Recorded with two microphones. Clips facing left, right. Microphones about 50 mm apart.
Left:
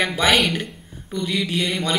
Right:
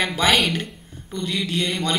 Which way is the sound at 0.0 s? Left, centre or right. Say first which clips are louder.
Left 1 dB; centre.